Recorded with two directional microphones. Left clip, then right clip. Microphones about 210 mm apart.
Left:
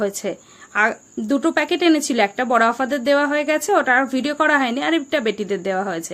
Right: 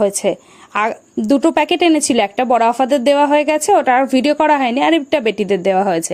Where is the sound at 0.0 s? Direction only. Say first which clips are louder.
Right 8 dB; 30° right (ahead or behind).